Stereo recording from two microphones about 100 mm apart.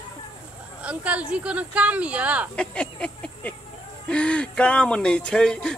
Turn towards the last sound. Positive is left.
turn(degrees=5)  # may be behind; listen again after turning